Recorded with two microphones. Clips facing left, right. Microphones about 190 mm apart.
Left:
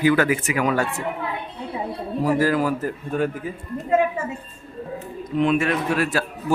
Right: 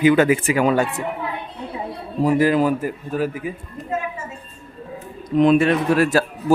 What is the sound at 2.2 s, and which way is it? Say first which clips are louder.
Speech: right 4 dB; 20° right (ahead or behind).